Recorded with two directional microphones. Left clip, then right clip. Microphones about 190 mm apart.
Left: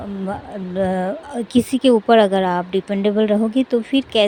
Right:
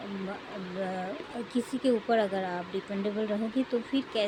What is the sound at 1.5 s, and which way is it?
Speech, 50° left (ahead or behind).